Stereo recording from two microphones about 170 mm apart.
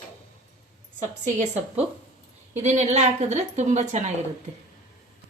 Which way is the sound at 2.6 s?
40° right (ahead or behind).